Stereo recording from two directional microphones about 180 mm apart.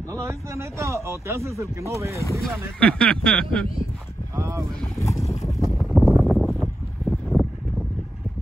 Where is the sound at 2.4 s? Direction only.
5° left (ahead or behind).